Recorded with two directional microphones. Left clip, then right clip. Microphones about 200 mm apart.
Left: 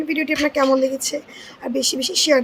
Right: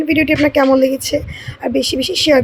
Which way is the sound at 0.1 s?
15° right (ahead or behind).